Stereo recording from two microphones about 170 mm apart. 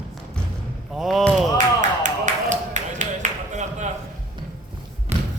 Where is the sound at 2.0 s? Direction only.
45° right (ahead or behind).